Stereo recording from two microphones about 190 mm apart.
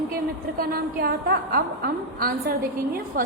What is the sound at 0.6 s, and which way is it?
A woman's voice, 50° right (ahead or behind).